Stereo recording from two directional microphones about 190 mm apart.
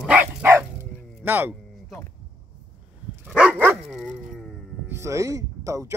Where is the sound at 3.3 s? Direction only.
5° right (ahead or behind).